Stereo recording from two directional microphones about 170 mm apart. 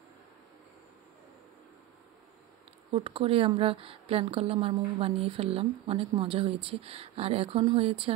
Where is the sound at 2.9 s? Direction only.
35° right (ahead or behind).